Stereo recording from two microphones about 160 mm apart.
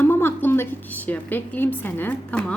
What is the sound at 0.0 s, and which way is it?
A woman's voice, 15° left (ahead or behind).